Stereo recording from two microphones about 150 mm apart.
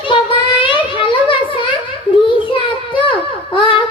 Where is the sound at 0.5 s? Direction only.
35° left (ahead or behind).